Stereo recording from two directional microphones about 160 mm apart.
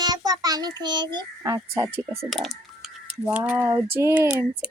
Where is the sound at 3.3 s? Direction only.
10° right (ahead or behind).